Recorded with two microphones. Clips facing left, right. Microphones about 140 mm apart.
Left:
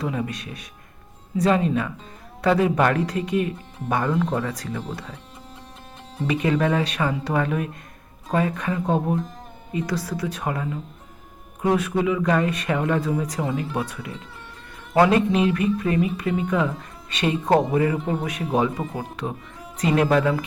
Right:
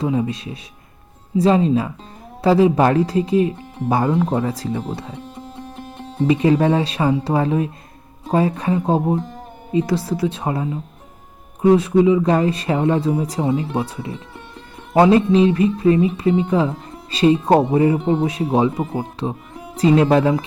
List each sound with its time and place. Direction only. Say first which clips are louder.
0.0 s speech: right 7 dB; 25° right (ahead or behind)
6.1 s speech: right 7 dB; 30° right (ahead or behind)